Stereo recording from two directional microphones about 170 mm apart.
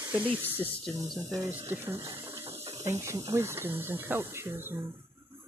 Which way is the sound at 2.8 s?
15° right (ahead or behind).